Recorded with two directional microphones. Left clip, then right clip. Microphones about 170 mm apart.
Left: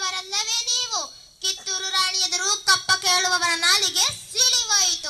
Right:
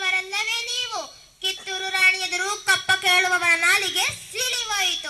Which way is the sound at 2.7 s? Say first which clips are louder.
Right 2 dB; 25° right (ahead or behind).